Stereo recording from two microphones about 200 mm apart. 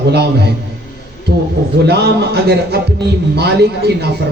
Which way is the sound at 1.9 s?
55° right (ahead or behind).